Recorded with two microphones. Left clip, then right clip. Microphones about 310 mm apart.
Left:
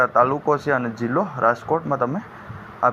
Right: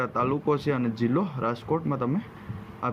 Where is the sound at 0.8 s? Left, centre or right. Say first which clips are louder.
Left 4 dB; left.